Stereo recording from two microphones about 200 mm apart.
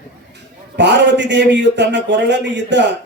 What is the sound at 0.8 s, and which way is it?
A man's voice, 60° right (ahead or behind).